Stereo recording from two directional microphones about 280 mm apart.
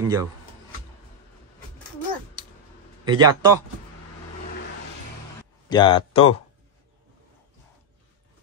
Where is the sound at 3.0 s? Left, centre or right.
Centre.